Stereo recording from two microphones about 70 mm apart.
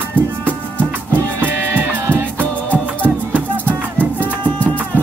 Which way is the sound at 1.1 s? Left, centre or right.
Right.